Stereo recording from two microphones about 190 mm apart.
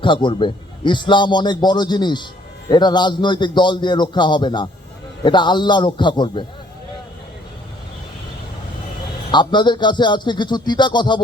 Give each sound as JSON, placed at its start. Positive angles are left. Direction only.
{"t": 0.0, "sound": "a man's voice", "side_deg": 25}
{"t": 9.3, "sound": "a man's voice", "side_deg": 25}